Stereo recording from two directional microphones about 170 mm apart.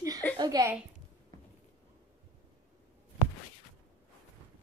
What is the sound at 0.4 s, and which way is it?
Speech, 20° right (ahead or behind).